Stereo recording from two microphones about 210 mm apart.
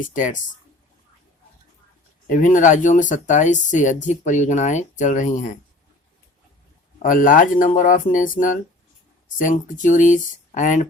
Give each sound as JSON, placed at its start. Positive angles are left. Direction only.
{"t": 0.0, "sound": "speech", "side_deg": 40}
{"t": 2.3, "sound": "speech", "side_deg": 40}
{"t": 7.0, "sound": "speech", "side_deg": 40}